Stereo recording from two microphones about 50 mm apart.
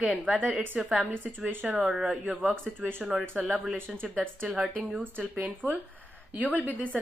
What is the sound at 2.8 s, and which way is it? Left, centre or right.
Speech, right.